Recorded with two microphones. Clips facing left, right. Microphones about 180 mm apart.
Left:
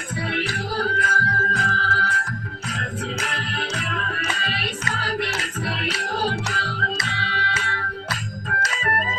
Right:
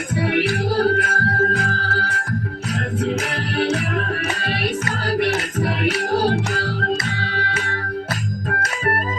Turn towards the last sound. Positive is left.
turn(degrees=-50)  # may be behind; listen again after turning